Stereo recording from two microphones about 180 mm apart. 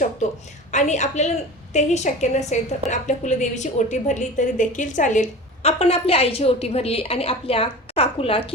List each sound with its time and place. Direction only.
0.2 s a woman's voice: 40° left (ahead or behind)